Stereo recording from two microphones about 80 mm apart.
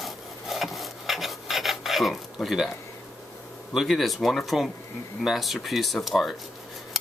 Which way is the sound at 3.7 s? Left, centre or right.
Centre.